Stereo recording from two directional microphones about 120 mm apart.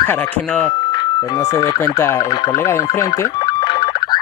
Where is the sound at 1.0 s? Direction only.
25° left (ahead or behind).